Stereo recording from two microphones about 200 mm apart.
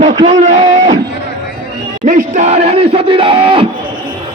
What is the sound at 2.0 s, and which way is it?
A man's voice, 35° right (ahead or behind).